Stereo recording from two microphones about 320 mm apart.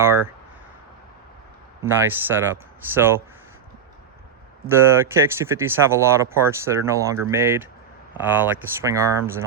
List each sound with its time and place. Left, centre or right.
0.0 s speech: centre
1.8 s speech: centre
4.6 s speech: centre